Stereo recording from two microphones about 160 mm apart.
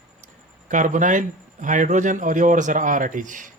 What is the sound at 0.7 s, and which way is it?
Speech, 50° right (ahead or behind).